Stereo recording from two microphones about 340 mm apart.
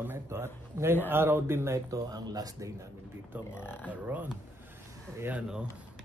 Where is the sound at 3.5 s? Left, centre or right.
Centre.